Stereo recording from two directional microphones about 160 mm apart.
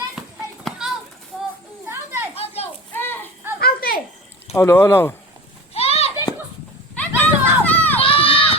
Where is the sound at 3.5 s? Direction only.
70° left (ahead or behind).